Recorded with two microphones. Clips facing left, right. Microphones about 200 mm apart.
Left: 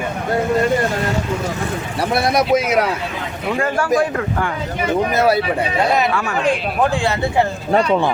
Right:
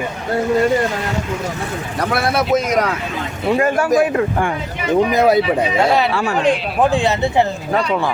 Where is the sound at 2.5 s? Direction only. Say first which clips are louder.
Even; 5° left (ahead or behind).